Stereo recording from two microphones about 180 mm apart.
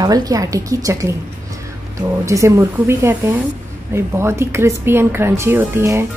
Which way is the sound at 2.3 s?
15° right (ahead or behind).